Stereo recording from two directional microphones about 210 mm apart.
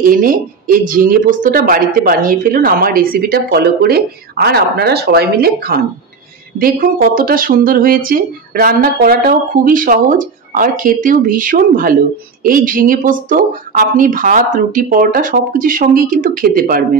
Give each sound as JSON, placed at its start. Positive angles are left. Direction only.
{"t": 0.0, "sound": "a woman's voice", "side_deg": -40}